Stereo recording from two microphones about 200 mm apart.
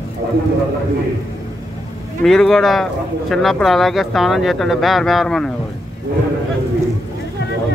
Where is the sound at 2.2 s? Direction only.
Centre (ahead or behind).